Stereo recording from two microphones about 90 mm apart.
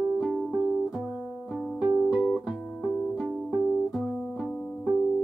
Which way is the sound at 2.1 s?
Centre (ahead or behind).